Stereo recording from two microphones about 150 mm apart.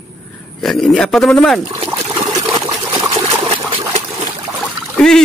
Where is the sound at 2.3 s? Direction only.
25° right (ahead or behind).